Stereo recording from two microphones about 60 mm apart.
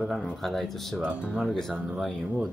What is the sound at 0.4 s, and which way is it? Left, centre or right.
Speech, centre.